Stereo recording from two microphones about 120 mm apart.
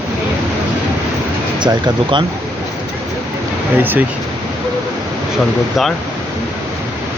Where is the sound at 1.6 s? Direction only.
40° right (ahead or behind).